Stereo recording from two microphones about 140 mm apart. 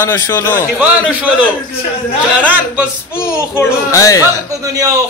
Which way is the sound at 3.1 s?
20° left (ahead or behind).